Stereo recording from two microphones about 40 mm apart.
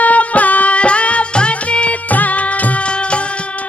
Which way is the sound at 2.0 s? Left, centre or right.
Left.